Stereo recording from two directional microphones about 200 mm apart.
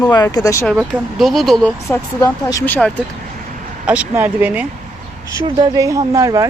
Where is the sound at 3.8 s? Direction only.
5° right (ahead or behind).